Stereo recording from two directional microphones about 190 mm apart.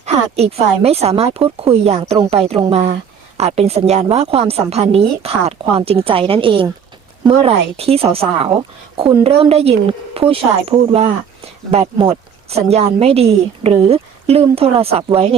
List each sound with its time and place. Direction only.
0.0 s speech: 30° right (ahead or behind)